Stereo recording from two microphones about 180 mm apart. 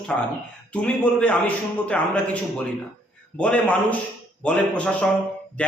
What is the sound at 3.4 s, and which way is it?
A man's voice, 5° left (ahead or behind).